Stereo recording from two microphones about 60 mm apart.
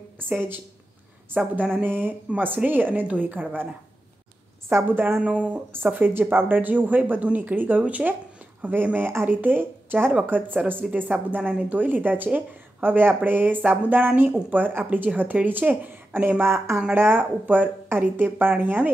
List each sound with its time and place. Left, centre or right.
1.3 s speech: right
4.8 s speech: right
5.2 s speech: right
5.9 s speech: right
16.9 s speech: right